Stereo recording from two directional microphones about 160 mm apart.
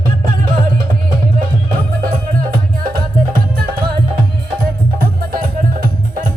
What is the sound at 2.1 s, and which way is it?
Music, 65° right (ahead or behind).